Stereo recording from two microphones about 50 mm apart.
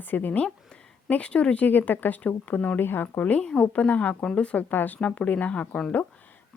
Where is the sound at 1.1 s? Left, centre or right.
Left.